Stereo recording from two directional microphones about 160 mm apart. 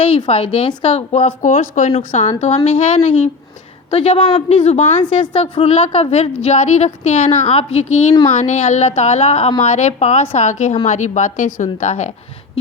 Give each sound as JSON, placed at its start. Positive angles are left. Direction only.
{"t": 0.0, "sound": "a woman's voice", "side_deg": 35}
{"t": 1.1, "sound": "a woman's voice", "side_deg": 50}
{"t": 5.0, "sound": "a woman's voice", "side_deg": 30}
{"t": 5.4, "sound": "a woman's voice", "side_deg": 40}